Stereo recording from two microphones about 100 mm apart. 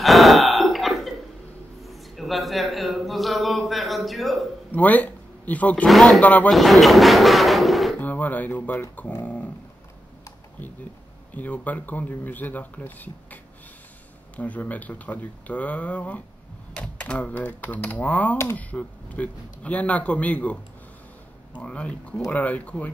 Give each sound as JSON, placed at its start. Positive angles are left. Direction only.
{"t": 0.0, "sound": "burping", "side_deg": 0}
{"t": 1.8, "sound": "a sound", "side_deg": 0}
{"t": 4.7, "sound": "speech", "side_deg": 15}
{"t": 5.9, "sound": "speech", "side_deg": 0}
{"t": 6.2, "sound": "speech", "side_deg": 15}
{"t": 6.5, "sound": "speech", "side_deg": 0}
{"t": 8.0, "sound": "speech", "side_deg": 15}
{"t": 11.3, "sound": "speech", "side_deg": 15}
{"t": 21.5, "sound": "speech", "side_deg": 10}